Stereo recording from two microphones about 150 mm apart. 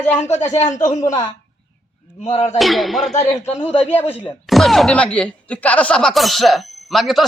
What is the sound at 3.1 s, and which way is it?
Speech, 45° left (ahead or behind).